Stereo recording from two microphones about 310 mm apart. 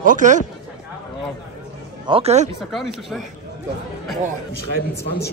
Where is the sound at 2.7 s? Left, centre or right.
Centre.